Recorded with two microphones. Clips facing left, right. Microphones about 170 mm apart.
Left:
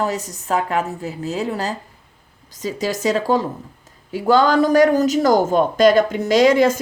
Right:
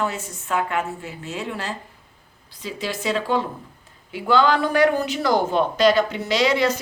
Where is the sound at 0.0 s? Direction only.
40° left (ahead or behind).